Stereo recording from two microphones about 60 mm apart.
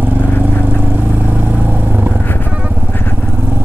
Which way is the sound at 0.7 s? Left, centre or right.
Right.